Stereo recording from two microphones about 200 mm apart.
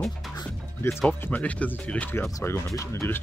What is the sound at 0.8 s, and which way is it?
Speech, 5° left (ahead or behind).